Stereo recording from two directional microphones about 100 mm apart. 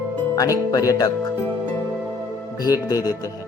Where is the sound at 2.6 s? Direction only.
40° left (ahead or behind).